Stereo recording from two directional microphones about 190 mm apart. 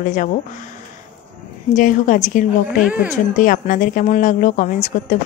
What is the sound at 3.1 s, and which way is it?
Speech, 45° left (ahead or behind).